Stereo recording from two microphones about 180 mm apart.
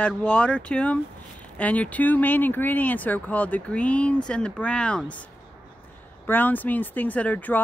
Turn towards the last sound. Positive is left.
turn(degrees=10)  # may be behind; listen again after turning